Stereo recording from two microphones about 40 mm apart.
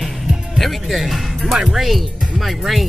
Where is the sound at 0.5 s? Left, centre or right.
Centre.